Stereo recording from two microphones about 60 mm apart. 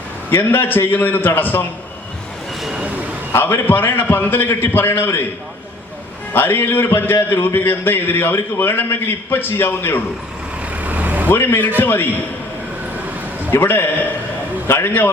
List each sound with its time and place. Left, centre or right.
0.3 s a man's voice: left
3.3 s a man's voice: left
6.3 s a man's voice: left
10.7 s vehicle: right
11.3 s a man's voice: left
13.5 s a man's voice: left